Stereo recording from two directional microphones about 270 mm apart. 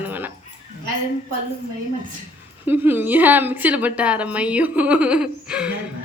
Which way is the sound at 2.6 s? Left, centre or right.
Centre.